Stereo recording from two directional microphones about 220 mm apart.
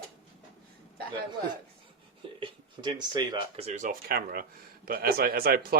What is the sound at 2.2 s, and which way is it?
A man's voice, 20° right (ahead or behind).